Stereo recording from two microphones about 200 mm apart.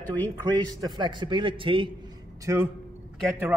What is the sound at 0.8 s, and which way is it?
A man's voice, 20° right (ahead or behind).